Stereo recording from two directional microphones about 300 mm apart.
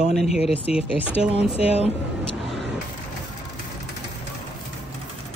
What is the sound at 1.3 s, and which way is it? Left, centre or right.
Speech, left.